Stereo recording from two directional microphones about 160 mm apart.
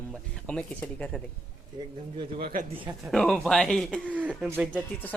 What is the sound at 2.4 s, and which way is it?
Speech, 60° right (ahead or behind).